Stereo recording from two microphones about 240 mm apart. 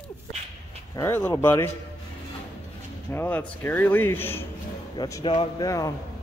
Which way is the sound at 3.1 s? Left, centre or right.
Centre.